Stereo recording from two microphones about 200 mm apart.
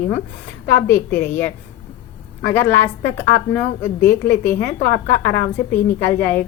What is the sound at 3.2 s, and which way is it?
A woman's voice, 10° left (ahead or behind).